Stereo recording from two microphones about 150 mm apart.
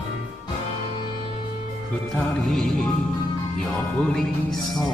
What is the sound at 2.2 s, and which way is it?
Music, 5° left (ahead or behind).